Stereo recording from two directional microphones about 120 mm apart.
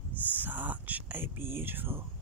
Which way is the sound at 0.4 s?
15° right (ahead or behind).